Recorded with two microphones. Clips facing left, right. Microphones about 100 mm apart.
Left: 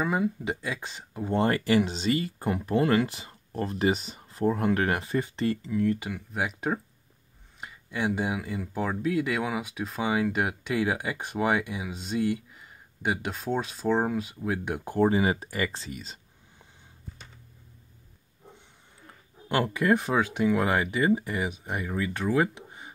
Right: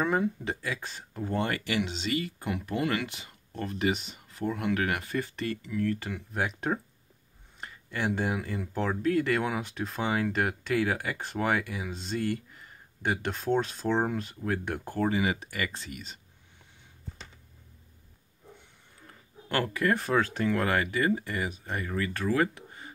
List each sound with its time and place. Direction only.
0.0 s speech: 5° left (ahead or behind)
0.6 s speech: 20° left (ahead or behind)
1.3 s speech: 35° left (ahead or behind)
6.0 s speech: 5° left (ahead or behind)
15.0 s speech: 35° left (ahead or behind)
16.0 s whispering: 35° left (ahead or behind)
19.5 s speech: 20° left (ahead or behind)